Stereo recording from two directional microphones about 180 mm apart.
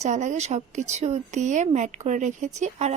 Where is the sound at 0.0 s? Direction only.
40° right (ahead or behind).